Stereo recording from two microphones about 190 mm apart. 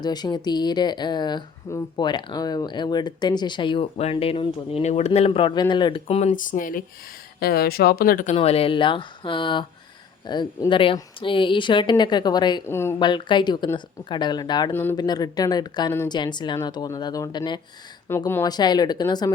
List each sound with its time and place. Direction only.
0.0 s speech: 20° left (ahead or behind); by 8.4 s 45° left (ahead or behind)
8.4 s speech: 30° left (ahead or behind); by 13.0 s 15° left (ahead or behind)
13.0 s speech: 25° left (ahead or behind)
14.7 s speech: 10° left (ahead or behind)